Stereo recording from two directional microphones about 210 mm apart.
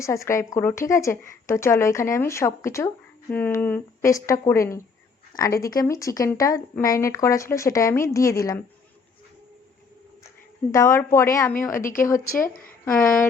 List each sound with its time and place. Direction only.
0.0 s speech: 15° left (ahead or behind)
10.7 s speech: 15° left (ahead or behind)
12.4 s speech: 40° left (ahead or behind)
12.8 s speech: 10° left (ahead or behind)